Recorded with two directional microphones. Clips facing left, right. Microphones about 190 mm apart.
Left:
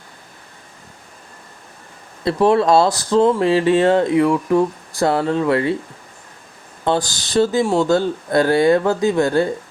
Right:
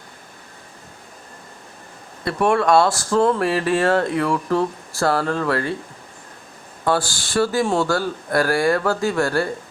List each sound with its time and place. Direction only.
2.2 s speech: 25° left (ahead or behind)
6.8 s speech: 20° left (ahead or behind)